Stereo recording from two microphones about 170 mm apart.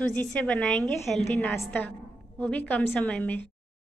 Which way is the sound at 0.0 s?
5° left (ahead or behind).